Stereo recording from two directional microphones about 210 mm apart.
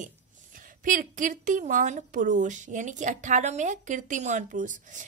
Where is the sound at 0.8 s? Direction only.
40° right (ahead or behind).